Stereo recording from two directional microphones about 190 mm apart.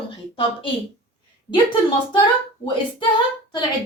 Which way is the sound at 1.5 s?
25° left (ahead or behind).